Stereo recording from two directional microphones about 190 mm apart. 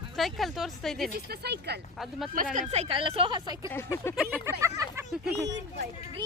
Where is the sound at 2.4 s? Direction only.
45° right (ahead or behind).